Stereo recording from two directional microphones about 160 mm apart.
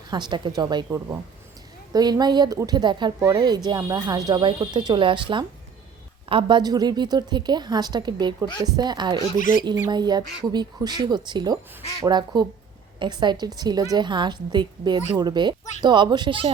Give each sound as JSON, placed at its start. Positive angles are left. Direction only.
{"t": 0.1, "sound": "a woman's voice", "side_deg": -30}
{"t": 1.9, "sound": "a woman's voice", "side_deg": -25}